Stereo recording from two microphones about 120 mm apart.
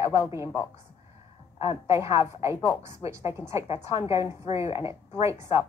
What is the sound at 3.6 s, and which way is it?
Speech, 60° left (ahead or behind).